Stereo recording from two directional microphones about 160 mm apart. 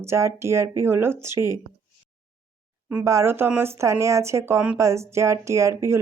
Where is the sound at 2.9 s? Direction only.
15° right (ahead or behind).